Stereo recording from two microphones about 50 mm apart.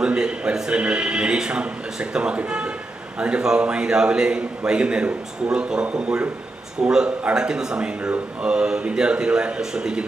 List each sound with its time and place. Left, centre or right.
0.0 s a man's voice: centre